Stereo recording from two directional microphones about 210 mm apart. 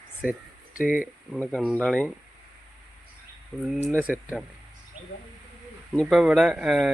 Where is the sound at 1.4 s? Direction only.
5° left (ahead or behind).